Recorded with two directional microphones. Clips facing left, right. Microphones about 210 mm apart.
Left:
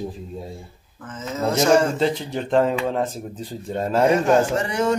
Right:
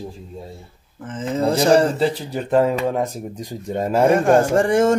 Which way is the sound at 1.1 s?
30° right (ahead or behind).